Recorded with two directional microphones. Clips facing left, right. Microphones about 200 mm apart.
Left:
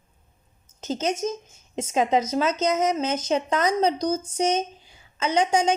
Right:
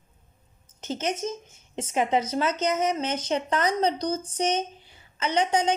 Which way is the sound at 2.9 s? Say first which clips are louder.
Left 3 dB; 10° left (ahead or behind).